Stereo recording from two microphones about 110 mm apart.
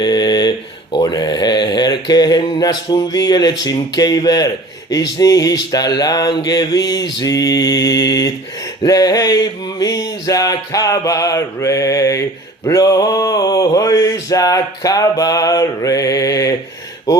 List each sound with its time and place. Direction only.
0.0 s a sound: 40° left (ahead or behind)
0.9 s speech: 40° left (ahead or behind)
3.6 s mantra: 35° left (ahead or behind)